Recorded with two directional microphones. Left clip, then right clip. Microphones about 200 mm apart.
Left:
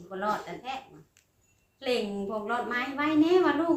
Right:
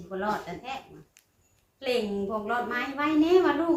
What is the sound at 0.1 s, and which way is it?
Speech, 25° left (ahead or behind).